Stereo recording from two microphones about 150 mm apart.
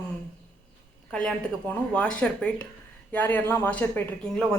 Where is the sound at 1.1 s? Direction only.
5° left (ahead or behind).